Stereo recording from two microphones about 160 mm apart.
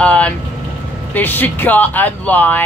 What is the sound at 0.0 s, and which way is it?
Vehicle, 5° left (ahead or behind).